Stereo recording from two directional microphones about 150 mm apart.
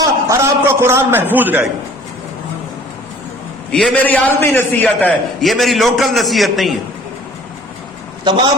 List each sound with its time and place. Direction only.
0.0 s a man's voice: 20° right (ahead or behind)
3.7 s a man's voice: 5° left (ahead or behind)
5.5 s a man's voice: centre (ahead or behind)
8.2 s a man's voice: 30° right (ahead or behind)